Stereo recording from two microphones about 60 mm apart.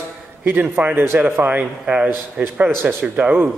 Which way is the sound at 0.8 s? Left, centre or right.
Right.